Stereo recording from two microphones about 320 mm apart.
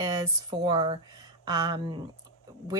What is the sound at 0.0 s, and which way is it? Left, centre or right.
Speech, centre.